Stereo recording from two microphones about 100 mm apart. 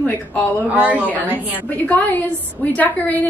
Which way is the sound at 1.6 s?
15° left (ahead or behind).